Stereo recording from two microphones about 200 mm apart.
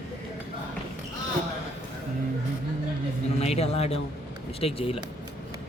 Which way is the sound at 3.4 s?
30° left (ahead or behind).